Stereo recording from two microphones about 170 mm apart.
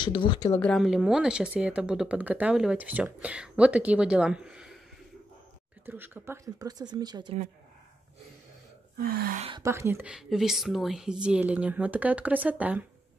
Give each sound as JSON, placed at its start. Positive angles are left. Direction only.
{"t": 0.0, "sound": "speech", "side_deg": 30}
{"t": 0.6, "sound": "speech", "side_deg": 0}
{"t": 5.9, "sound": "speech", "side_deg": -10}
{"t": 8.9, "sound": "gasp", "side_deg": -60}
{"t": 9.6, "sound": "speech", "side_deg": -15}